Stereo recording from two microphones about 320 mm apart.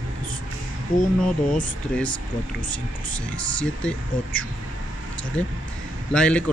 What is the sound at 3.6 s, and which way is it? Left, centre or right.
Speech, centre.